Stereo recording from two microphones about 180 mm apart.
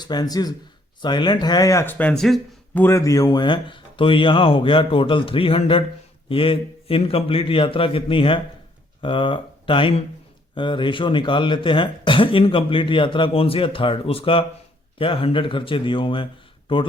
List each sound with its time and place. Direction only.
0.0 s speech: 20° left (ahead or behind); by 2.8 s centre (ahead or behind)
2.8 s a man's voice: 15° left (ahead or behind)